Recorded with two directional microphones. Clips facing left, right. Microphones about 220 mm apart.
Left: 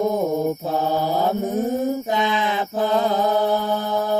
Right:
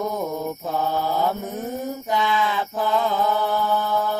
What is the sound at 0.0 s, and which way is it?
Mantra, 20° left (ahead or behind).